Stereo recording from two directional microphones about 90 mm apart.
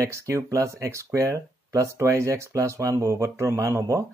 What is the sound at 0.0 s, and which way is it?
Speech, 35° right (ahead or behind).